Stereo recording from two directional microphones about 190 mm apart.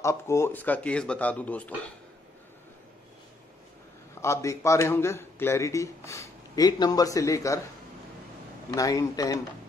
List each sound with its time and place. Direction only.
0.0 s a man's voice: 15° left (ahead or behind)
4.2 s a man's voice: 15° left (ahead or behind)
8.6 s a man's voice: 15° left (ahead or behind)